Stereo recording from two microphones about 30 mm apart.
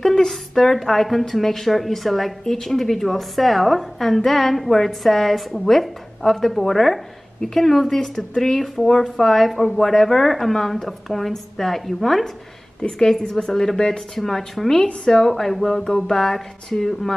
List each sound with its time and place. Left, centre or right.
0.0 s a sound: left
0.3 s a woman's voice: centre
2.4 s a woman's voice: centre
7.9 s a woman's voice: centre
13.3 s a woman's voice: centre